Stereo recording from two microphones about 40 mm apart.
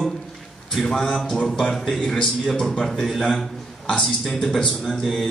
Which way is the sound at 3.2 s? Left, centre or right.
Centre.